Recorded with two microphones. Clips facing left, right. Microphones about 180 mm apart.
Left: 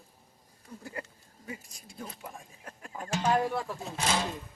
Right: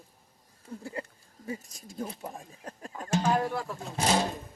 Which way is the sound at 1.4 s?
35° right (ahead or behind).